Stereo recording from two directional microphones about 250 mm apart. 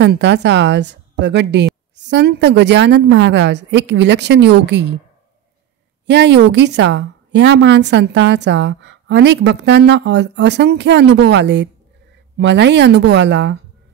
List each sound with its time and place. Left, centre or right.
0.0 s a woman's voice: right
6.0 s a woman's voice: right